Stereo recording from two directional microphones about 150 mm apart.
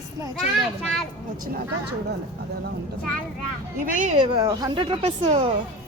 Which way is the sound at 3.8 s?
55° right (ahead or behind).